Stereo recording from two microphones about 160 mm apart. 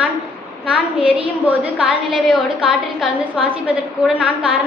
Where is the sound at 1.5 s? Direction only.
5° right (ahead or behind).